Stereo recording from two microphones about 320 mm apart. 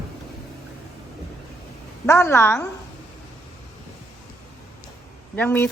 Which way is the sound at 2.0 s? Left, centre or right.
Centre.